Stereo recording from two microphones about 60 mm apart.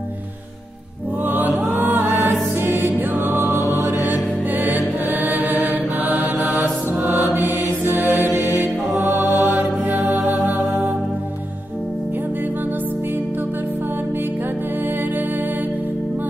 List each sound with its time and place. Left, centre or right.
1.2 s music: right
7.8 s mantra: right
8.9 s music: right